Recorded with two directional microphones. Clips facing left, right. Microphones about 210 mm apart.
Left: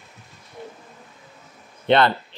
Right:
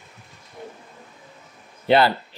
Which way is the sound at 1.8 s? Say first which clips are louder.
Even; 5° right (ahead or behind).